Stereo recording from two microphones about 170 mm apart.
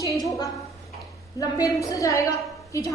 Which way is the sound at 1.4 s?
20° left (ahead or behind).